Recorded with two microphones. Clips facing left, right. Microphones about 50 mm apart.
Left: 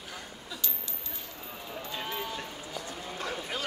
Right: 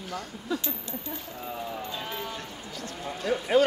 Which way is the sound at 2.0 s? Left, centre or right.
Centre.